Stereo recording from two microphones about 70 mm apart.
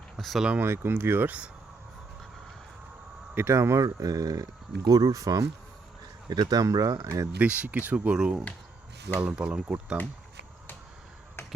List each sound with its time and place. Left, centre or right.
0.2 s speech: centre
0.6 s speech: right
3.3 s speech: right
3.8 s speech: right
6.2 s speech: right
7.3 s speech: centre